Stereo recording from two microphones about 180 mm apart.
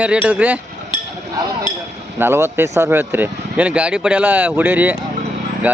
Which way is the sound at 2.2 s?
15° right (ahead or behind).